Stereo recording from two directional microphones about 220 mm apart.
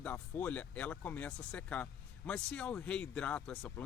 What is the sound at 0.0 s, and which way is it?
Speech, 5° left (ahead or behind).